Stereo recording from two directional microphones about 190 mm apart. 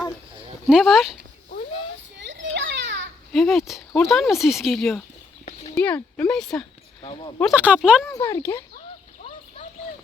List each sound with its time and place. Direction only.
0.7 s speech: centre (ahead or behind)
2.1 s children playing: 70° right (ahead or behind)
3.3 s speech: centre (ahead or behind)
5.7 s speech: 10° left (ahead or behind)
7.0 s speech: 25° left (ahead or behind)
7.5 s speech: 5° right (ahead or behind)
8.1 s speech: 15° left (ahead or behind)